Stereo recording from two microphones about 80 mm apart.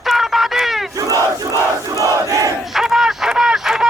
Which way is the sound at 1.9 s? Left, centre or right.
Right.